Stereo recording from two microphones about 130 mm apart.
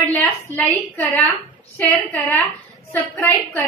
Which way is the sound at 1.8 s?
15° left (ahead or behind).